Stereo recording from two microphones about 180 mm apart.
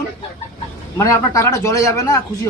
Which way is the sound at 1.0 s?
15° left (ahead or behind).